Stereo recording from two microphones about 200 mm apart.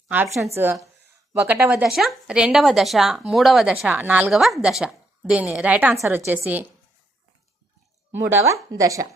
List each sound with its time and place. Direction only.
0.5 s a woman's voice: 10° right (ahead or behind)
8.1 s a woman's voice: 10° right (ahead or behind)